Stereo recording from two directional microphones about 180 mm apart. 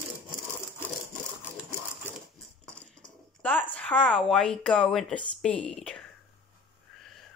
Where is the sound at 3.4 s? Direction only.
10° left (ahead or behind).